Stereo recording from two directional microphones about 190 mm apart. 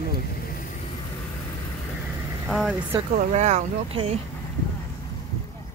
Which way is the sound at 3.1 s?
40° right (ahead or behind).